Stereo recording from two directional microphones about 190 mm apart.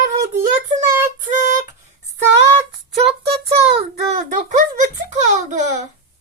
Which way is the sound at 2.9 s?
30° right (ahead or behind).